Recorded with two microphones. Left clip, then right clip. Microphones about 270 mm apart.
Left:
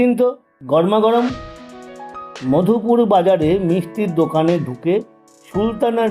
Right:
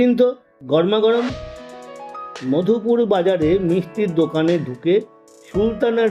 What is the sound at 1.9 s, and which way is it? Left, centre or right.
Music, centre.